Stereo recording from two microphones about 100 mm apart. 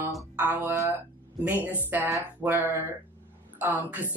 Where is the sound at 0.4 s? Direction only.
20° right (ahead or behind).